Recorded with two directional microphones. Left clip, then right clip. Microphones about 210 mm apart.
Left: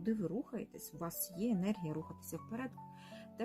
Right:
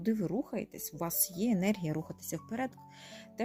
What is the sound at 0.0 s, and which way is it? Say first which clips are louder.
Speech: right 5 dB; 35° right (ahead or behind).